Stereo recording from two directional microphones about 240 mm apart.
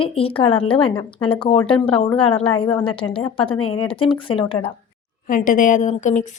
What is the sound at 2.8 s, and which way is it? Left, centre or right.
Speech, left.